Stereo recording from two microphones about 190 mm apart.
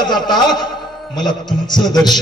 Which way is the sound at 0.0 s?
20° left (ahead or behind).